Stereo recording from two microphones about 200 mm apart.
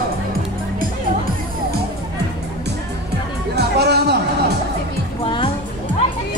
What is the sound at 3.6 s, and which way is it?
Music, 55° right (ahead or behind).